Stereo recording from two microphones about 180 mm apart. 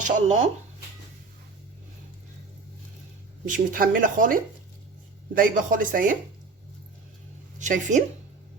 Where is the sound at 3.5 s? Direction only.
50° right (ahead or behind).